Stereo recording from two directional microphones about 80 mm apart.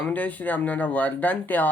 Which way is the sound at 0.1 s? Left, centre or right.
Left.